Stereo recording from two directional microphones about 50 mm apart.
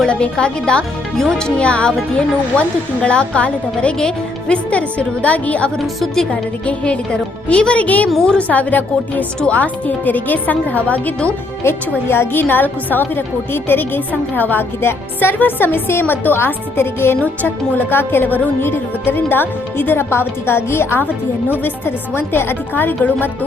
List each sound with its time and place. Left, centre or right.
0.1 s a woman's voice: left
3.9 s speech: centre
4.5 s a woman's voice: left
5.8 s a woman's voice: centre
6.3 s a woman's voice: left
11.6 s a woman's voice: left
14.8 s speech: left
17.2 s speech: left